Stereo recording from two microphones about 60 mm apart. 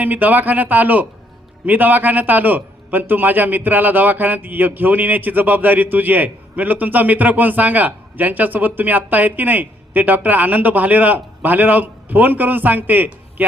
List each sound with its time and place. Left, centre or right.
0.0 s a man's voice: right